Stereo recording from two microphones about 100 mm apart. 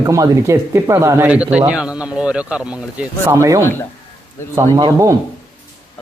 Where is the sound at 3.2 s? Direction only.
30° right (ahead or behind).